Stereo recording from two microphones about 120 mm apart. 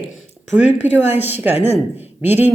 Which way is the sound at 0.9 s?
20° right (ahead or behind).